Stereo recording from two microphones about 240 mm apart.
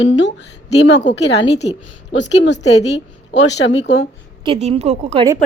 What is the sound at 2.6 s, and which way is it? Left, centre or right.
Speech, left.